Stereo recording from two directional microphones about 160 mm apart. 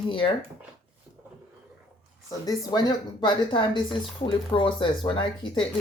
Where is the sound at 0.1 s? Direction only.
30° left (ahead or behind).